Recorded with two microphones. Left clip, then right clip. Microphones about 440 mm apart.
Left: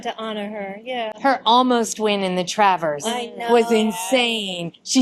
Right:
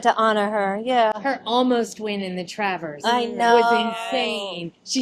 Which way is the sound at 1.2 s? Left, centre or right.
Left.